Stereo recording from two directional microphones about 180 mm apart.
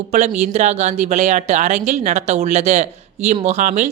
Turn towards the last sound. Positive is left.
turn(degrees=-40)  # may be behind; listen again after turning